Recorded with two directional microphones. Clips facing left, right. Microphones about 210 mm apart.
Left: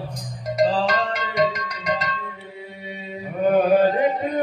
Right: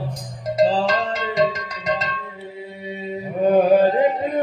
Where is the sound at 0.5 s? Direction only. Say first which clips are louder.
Right 2 dB; 25° right (ahead or behind).